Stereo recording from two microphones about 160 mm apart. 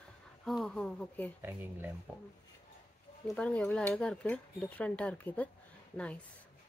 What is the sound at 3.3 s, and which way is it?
Speech, 5° left (ahead or behind).